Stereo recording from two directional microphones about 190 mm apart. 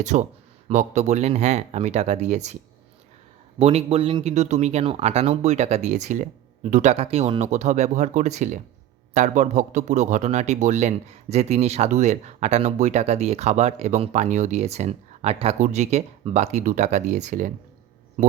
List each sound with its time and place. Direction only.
0.0 s speech: 40° right (ahead or behind)
3.6 s speech: 35° right (ahead or behind)